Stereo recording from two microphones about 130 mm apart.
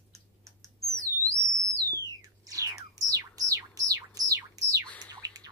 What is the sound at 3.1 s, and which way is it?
Music, 25° right (ahead or behind).